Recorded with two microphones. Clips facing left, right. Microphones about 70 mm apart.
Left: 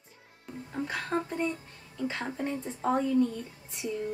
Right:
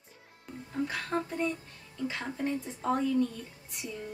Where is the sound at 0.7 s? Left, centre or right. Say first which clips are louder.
Even; centre.